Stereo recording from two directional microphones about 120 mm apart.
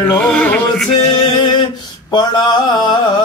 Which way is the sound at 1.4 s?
40° left (ahead or behind).